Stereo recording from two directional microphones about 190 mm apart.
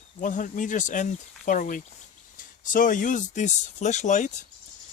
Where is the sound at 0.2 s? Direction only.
45° left (ahead or behind).